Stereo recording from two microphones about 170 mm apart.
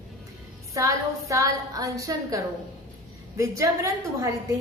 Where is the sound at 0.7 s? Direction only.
20° right (ahead or behind).